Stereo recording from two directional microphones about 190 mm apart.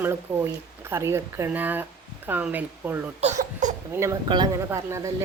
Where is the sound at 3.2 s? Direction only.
40° right (ahead or behind).